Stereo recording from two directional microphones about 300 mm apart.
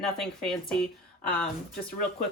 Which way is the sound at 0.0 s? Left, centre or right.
Centre.